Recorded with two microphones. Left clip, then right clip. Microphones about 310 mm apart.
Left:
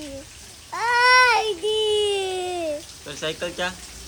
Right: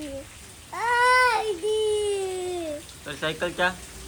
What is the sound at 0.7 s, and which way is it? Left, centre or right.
Child singing, centre.